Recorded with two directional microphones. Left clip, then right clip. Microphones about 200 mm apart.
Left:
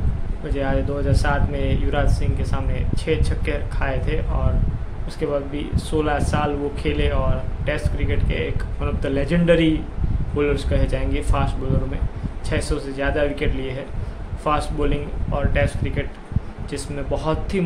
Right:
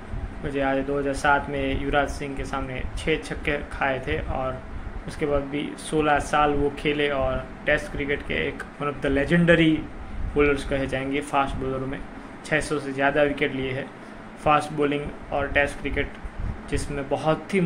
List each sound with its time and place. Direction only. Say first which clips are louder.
0.6 s speech: even; 15° left (ahead or behind)
5.2 s speech: left 1 dB; 15° left (ahead or behind)
12.4 s speech: right 1 dB; 10° left (ahead or behind)